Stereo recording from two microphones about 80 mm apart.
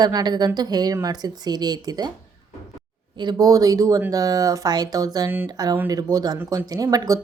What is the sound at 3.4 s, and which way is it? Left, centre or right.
A woman's voice, right.